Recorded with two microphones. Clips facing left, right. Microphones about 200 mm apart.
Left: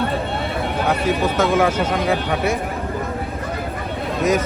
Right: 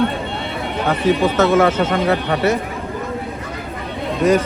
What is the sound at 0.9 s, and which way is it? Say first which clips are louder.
A man's voice: right 5 dB; 5° left (ahead or behind).